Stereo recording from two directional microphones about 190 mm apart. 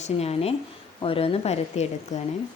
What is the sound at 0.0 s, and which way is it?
Speech, 35° left (ahead or behind).